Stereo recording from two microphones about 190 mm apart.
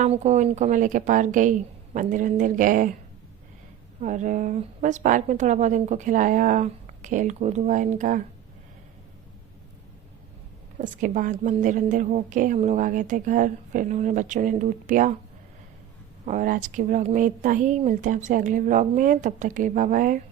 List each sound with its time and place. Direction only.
0.0 s speech: 35° right (ahead or behind)
4.0 s a woman's voice: 40° right (ahead or behind)
10.8 s a woman's voice: 45° right (ahead or behind)
16.2 s speech: 40° right (ahead or behind)